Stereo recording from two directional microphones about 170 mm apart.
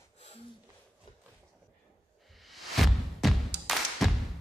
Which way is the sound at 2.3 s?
Centre (ahead or behind).